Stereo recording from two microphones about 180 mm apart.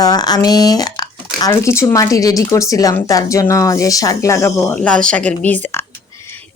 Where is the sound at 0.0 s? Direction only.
20° left (ahead or behind).